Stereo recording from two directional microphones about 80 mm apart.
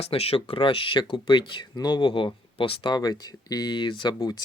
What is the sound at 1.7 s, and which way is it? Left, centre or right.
Speech, left.